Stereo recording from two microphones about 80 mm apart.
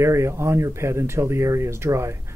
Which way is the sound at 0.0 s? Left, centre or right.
Right.